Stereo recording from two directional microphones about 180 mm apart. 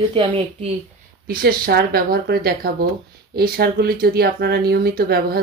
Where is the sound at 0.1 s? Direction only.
30° right (ahead or behind).